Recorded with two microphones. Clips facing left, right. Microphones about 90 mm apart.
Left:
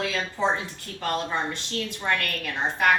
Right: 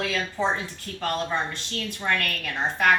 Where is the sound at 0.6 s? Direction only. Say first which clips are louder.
Right 1 dB; 20° left (ahead or behind).